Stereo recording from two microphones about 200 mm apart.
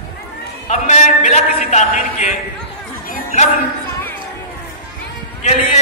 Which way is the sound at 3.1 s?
35° left (ahead or behind).